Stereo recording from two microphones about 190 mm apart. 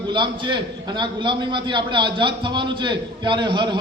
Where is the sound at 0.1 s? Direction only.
25° right (ahead or behind).